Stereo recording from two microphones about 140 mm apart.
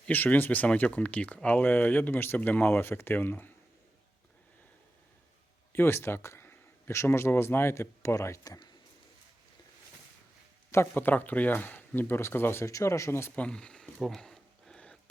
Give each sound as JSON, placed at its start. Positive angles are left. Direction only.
{"t": 0.1, "sound": "speech", "side_deg": 15}
{"t": 5.7, "sound": "speech", "side_deg": 15}
{"t": 10.7, "sound": "speech", "side_deg": 15}